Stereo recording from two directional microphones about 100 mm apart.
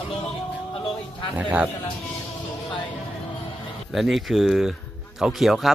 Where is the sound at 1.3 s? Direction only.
15° right (ahead or behind).